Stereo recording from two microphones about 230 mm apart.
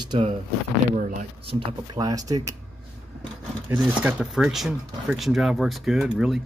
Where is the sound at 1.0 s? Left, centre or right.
Right.